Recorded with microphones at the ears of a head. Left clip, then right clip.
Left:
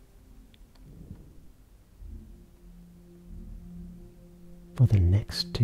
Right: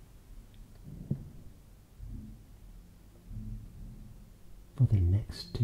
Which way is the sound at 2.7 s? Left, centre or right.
Left.